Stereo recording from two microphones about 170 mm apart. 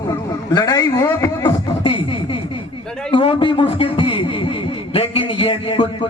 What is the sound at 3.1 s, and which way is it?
A man's voice, 35° left (ahead or behind).